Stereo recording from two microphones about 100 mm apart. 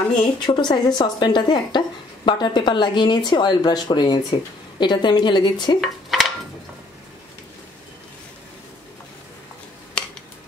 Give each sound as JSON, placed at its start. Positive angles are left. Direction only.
{"t": 0.4, "sound": "speech", "side_deg": 45}
{"t": 5.8, "sound": "dishes", "side_deg": 0}